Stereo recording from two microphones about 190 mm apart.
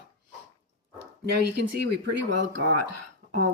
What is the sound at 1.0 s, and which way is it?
Speech, 60° right (ahead or behind).